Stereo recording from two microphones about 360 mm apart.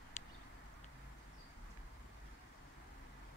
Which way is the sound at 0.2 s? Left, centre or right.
Centre.